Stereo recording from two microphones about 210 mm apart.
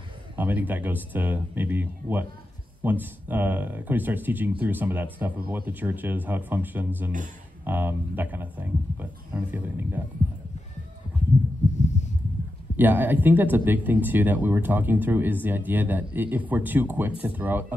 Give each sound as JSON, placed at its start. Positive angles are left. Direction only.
{"t": 0.4, "sound": "speech", "side_deg": -10}
{"t": 11.8, "sound": "heart sounds", "side_deg": 35}
{"t": 12.7, "sound": "speech", "side_deg": -10}